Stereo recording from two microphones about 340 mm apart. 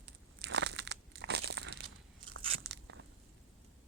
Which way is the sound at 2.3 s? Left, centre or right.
Right.